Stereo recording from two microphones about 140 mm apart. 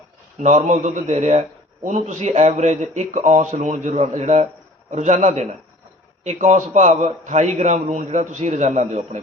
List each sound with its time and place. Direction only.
0.3 s a man's voice: 55° right (ahead or behind)